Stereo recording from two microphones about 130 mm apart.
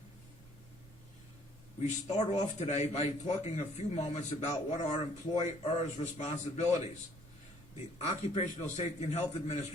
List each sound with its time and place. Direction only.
1.8 s a man's voice: 60° left (ahead or behind)
7.9 s a man's voice: 55° left (ahead or behind)